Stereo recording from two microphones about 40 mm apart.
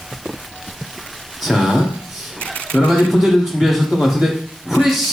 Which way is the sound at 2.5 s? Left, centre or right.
Left.